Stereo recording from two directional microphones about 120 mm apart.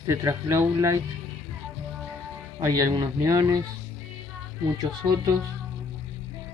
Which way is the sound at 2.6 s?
30° right (ahead or behind).